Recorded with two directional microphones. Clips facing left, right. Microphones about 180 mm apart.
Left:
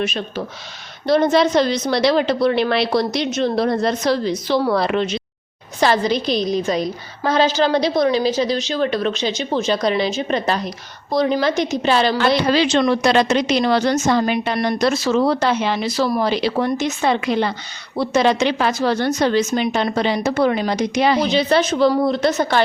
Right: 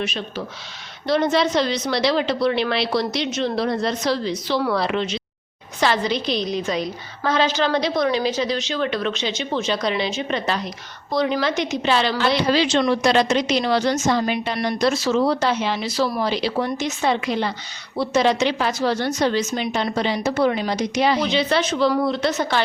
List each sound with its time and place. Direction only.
0.0 s a woman's voice: 50° left (ahead or behind)
21.2 s a woman's voice: 40° left (ahead or behind)